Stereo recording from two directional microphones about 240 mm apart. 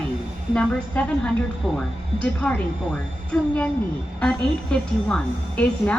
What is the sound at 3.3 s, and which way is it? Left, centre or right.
A woman's voice, centre.